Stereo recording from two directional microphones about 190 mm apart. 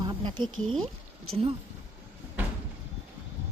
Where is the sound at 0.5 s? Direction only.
90° right.